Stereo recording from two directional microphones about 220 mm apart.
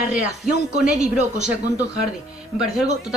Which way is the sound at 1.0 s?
30° right (ahead or behind).